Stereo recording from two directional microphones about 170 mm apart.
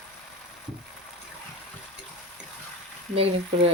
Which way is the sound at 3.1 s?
35° right (ahead or behind).